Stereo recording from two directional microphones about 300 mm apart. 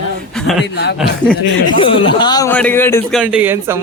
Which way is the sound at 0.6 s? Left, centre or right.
Left.